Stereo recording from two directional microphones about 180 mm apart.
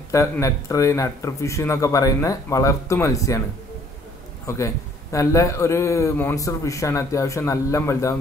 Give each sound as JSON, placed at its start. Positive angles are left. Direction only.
{"t": 0.1, "sound": "a man's voice", "side_deg": 15}
{"t": 4.5, "sound": "a man's voice", "side_deg": 15}